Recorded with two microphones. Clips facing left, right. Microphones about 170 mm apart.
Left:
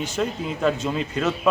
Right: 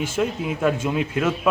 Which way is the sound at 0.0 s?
10° right (ahead or behind).